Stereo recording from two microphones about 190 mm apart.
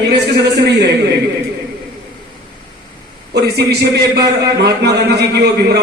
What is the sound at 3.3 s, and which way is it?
A man's voice, 60° right (ahead or behind).